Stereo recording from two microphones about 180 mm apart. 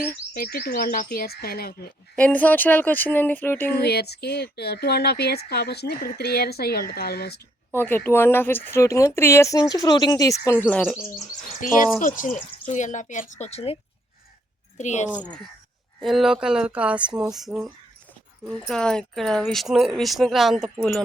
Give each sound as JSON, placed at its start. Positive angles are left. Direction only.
{"t": 0.3, "sound": "speech", "side_deg": 55}
{"t": 2.1, "sound": "speech", "side_deg": 10}
{"t": 3.7, "sound": "speech", "side_deg": 60}
{"t": 7.7, "sound": "speech", "side_deg": 10}
{"t": 11.6, "sound": "speech", "side_deg": 45}
{"t": 14.8, "sound": "speech", "side_deg": 40}
{"t": 16.0, "sound": "speech", "side_deg": 0}